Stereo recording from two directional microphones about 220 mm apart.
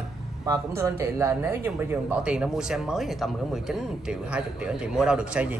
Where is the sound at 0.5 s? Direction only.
15° right (ahead or behind).